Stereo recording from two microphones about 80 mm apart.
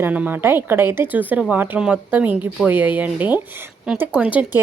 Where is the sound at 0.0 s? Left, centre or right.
Right.